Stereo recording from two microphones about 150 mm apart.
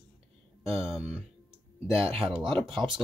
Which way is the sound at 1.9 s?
40° right (ahead or behind).